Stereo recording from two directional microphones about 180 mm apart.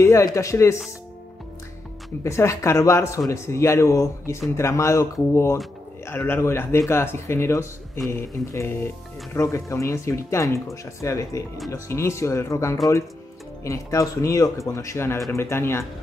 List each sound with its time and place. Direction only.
0.0 s speech: 20° left (ahead or behind)
2.2 s speech: 15° left (ahead or behind)